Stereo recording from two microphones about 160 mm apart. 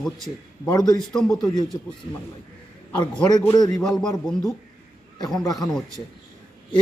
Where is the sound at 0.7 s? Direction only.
25° left (ahead or behind).